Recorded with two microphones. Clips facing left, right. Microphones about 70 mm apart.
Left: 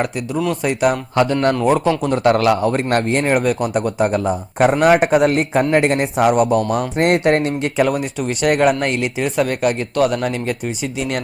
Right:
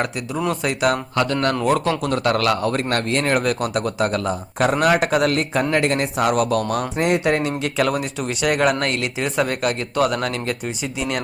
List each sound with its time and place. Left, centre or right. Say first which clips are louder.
0.6 s a man's voice: left 3 dB; centre
1.5 s a man's voice: left 3 dB; centre
2.9 s a man's voice: left 4 dB; left
3.2 s a man's voice: left 1 dB; centre
3.8 s speech: left 3 dB; centre
4.8 s a man's voice: left 5 dB; left
7.0 s speech: left 4 dB; left
8.4 s a man's voice: left 4 dB; left
9.2 s speech: left 3 dB; centre